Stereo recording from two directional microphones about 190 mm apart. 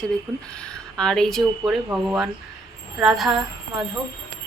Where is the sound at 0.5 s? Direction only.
5° left (ahead or behind).